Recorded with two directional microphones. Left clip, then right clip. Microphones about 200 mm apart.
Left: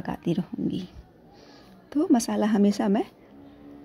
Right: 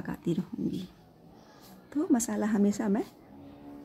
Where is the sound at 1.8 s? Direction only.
15° left (ahead or behind).